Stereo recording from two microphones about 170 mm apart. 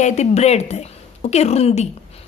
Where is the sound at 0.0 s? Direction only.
40° left (ahead or behind).